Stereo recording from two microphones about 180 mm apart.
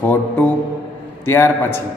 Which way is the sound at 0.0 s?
10° left (ahead or behind).